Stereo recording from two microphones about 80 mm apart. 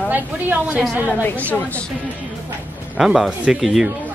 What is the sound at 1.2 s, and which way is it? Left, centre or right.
Speech, centre.